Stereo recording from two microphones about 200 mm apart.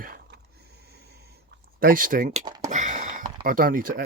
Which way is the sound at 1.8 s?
45° right (ahead or behind).